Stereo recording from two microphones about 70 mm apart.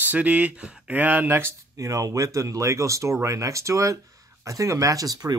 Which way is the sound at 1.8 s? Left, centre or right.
Right.